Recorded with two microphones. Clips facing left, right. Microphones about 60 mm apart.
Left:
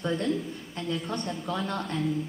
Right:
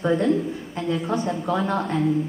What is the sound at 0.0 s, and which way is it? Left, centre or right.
Speech, centre.